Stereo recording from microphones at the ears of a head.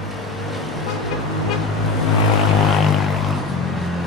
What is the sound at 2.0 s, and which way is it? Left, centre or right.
Vehicle, left.